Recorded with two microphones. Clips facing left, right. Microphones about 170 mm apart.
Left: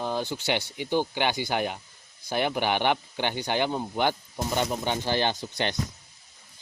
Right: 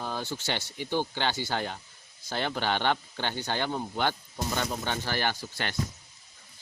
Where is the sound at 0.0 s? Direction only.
15° left (ahead or behind).